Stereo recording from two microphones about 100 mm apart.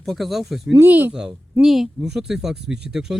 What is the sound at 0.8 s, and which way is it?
Speech, 20° right (ahead or behind).